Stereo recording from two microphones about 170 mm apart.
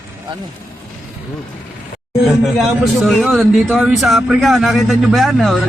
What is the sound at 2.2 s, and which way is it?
Speech, centre (ahead or behind).